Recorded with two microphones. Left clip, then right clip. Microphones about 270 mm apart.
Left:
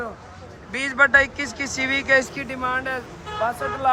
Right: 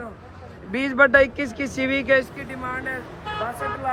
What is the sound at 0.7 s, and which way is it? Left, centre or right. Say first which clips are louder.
Speech: even; centre.